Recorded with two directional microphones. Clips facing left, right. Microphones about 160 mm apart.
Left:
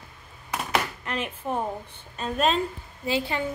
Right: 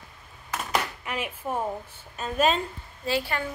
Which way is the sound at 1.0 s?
10° right (ahead or behind).